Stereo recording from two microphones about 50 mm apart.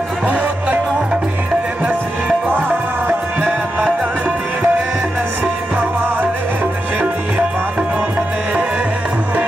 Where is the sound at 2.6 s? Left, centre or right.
Right.